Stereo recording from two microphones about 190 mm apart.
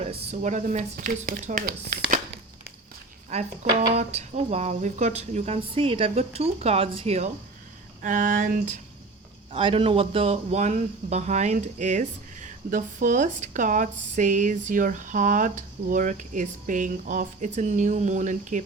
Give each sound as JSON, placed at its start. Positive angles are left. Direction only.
{"t": 0.0, "sound": "speech", "side_deg": -35}
{"t": 3.2, "sound": "speech", "side_deg": -35}
{"t": 8.0, "sound": "a sound", "side_deg": -45}
{"t": 9.5, "sound": "speech", "side_deg": -25}